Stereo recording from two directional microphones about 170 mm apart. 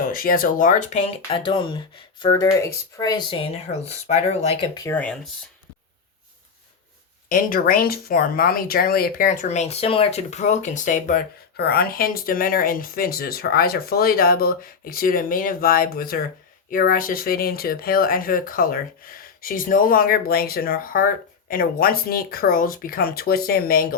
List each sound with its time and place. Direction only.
0.0 s speech: 55° left (ahead or behind); by 4.7 s 40° left (ahead or behind)
4.7 s speech: 20° left (ahead or behind)
4.9 s speech: 5° left (ahead or behind)
7.3 s speech: 55° left (ahead or behind)
11.5 s speech: 65° left (ahead or behind)